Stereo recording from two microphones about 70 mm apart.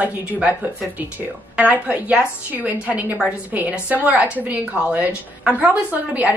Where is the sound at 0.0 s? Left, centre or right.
Centre.